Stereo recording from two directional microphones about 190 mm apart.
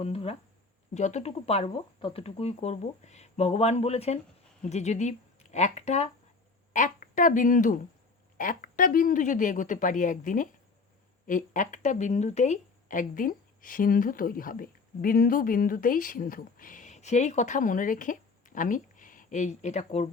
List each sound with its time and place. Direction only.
0.0 s a woman's voice: 30° left (ahead or behind)